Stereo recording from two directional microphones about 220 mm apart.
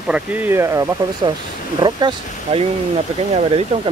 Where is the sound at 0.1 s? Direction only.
5° right (ahead or behind).